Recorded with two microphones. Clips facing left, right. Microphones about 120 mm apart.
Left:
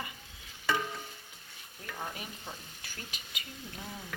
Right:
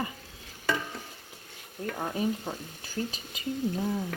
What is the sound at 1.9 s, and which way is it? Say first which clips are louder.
Speech: right 11 dB; 40° right (ahead or behind).